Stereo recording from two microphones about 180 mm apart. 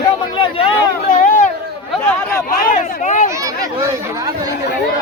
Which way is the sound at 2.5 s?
45° left (ahead or behind).